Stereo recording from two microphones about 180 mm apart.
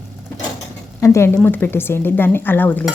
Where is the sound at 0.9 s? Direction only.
15° left (ahead or behind).